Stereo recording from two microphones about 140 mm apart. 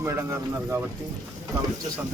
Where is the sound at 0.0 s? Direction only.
20° right (ahead or behind).